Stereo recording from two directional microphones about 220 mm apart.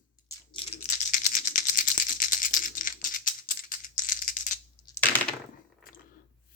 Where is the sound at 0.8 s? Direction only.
35° left (ahead or behind).